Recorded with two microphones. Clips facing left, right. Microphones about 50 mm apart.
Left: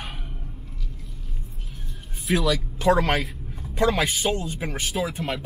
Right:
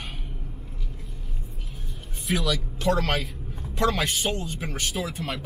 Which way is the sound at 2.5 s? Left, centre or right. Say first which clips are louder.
Left 5 dB; centre.